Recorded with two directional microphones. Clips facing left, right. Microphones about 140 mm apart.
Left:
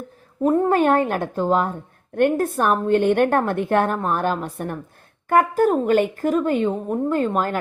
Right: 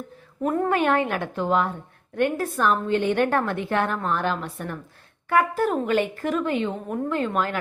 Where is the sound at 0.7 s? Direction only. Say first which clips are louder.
Left 4 dB; 40° left (ahead or behind).